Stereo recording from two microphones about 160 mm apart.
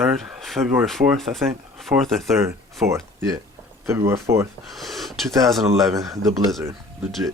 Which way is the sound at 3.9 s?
15° right (ahead or behind).